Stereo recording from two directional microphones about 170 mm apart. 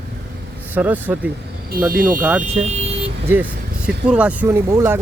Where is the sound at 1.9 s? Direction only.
55° right (ahead or behind).